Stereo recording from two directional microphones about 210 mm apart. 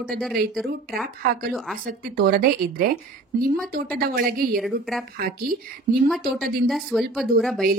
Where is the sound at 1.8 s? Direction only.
45° right (ahead or behind).